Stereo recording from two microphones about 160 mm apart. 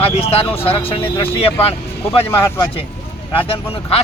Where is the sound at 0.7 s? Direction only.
35° left (ahead or behind).